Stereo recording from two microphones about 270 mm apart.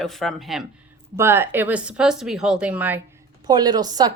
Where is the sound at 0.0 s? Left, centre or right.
Centre.